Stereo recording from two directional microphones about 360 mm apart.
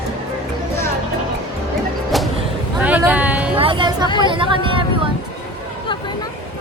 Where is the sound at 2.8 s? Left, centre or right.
Centre.